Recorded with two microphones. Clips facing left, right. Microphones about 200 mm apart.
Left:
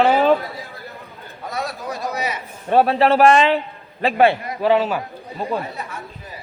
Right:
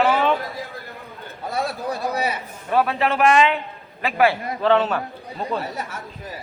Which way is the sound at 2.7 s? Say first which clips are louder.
Left 5 dB; 30° left (ahead or behind).